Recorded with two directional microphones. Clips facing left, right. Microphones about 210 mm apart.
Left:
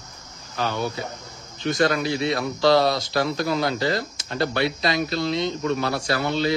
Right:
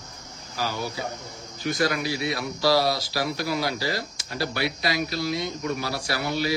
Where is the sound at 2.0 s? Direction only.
25° left (ahead or behind).